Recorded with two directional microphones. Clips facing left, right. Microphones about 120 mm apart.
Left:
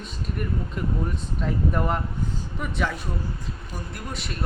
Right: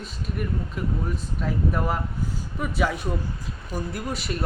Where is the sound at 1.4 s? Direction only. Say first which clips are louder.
Left 1 dB; 5° right (ahead or behind).